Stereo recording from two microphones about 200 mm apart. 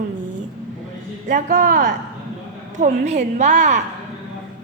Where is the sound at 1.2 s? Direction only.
45° right (ahead or behind).